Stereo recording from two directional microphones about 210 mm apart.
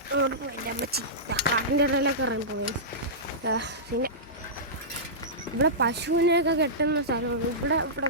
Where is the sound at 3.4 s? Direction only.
55° right (ahead or behind).